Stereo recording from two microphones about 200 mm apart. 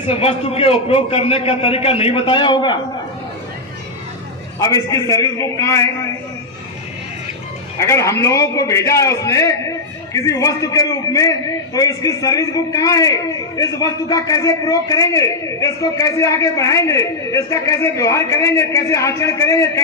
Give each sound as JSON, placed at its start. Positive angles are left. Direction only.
{"t": 0.1, "sound": "a man's voice", "side_deg": 30}
{"t": 4.6, "sound": "a man's voice", "side_deg": 15}
{"t": 7.8, "sound": "a man's voice", "side_deg": 15}